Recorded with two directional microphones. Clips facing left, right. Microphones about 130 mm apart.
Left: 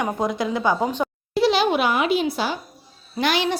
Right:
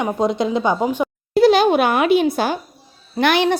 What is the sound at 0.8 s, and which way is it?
Speech, 10° right (ahead or behind).